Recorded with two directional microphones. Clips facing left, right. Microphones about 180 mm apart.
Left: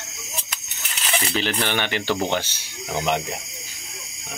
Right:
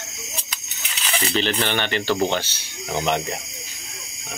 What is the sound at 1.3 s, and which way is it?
Speech, 10° left (ahead or behind).